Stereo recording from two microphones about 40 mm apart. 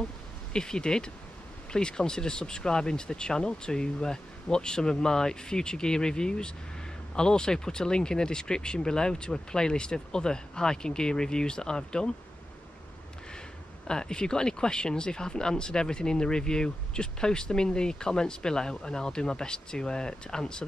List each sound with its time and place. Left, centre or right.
0.5 s speech: centre
13.8 s speech: centre